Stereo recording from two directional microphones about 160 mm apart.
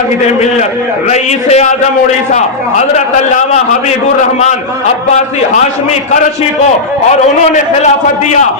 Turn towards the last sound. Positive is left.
turn(degrees=45)  # may be behind; listen again after turning